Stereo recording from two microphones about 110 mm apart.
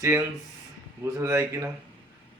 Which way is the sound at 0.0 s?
25° right (ahead or behind).